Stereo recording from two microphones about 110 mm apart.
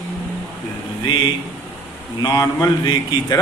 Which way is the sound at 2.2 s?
35° left (ahead or behind).